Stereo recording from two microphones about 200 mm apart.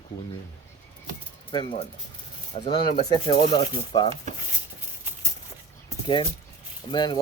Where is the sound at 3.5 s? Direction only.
20° left (ahead or behind).